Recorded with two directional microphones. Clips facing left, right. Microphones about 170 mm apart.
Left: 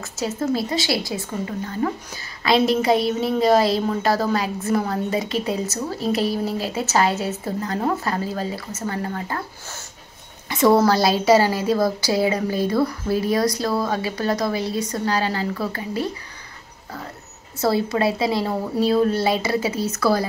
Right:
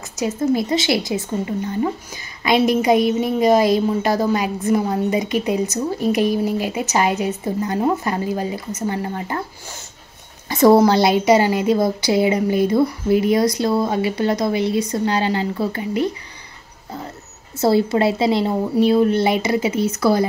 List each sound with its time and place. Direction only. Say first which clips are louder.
0.0 s a woman's voice: right 4 dB; 15° right (ahead or behind)
2.4 s a woman's voice: right 2 dB; 15° right (ahead or behind)
10.5 s a woman's voice: right 4 dB; 40° right (ahead or behind)
10.8 s a woman's voice: right 3 dB; 20° right (ahead or behind)
17.6 s a woman's voice: right 4 dB; 25° right (ahead or behind)